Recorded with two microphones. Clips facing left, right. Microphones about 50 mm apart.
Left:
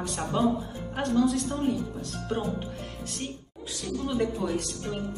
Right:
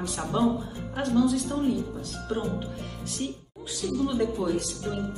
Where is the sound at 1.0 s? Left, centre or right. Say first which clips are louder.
Right 1 dB; left.